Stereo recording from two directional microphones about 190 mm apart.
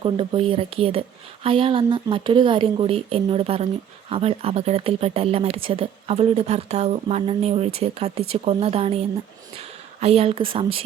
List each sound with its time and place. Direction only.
0.0 s a woman's voice: 30° right (ahead or behind)